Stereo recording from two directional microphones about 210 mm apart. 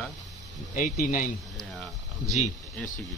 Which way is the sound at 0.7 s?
40° left (ahead or behind).